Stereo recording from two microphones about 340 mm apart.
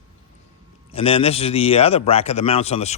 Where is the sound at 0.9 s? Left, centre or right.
Centre.